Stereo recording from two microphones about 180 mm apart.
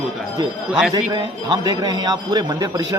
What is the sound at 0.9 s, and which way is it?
A man's voice, 25° right (ahead or behind).